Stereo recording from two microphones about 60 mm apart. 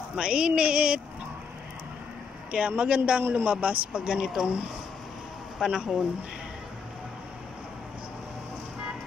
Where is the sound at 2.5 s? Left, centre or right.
Centre.